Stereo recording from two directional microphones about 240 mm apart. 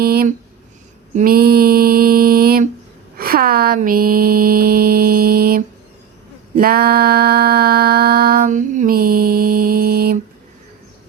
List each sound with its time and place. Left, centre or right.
0.0 s speech: right
1.1 s mantra: right
3.2 s a sound: right